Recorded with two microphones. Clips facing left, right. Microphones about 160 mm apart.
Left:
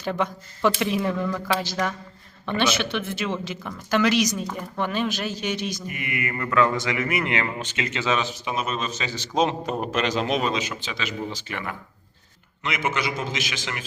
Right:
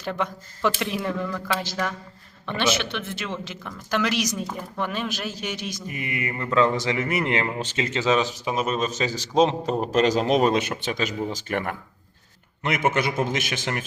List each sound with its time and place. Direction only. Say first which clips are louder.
0.0 s speech: left 2 dB; centre (ahead or behind)
5.9 s a man's voice: even; 35° right (ahead or behind); by 13.8 s 50° right (ahead or behind)